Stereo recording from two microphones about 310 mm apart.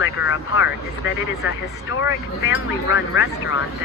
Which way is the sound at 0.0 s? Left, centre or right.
Left.